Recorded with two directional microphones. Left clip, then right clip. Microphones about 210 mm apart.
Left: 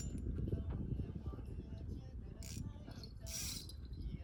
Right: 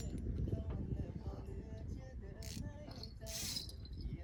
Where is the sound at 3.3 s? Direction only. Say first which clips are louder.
Right 2 dB; 45° right (ahead or behind).